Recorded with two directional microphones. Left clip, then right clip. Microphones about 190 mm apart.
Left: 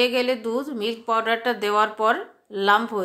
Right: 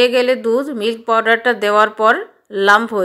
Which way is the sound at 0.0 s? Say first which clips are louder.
Right 8 dB; 25° right (ahead or behind).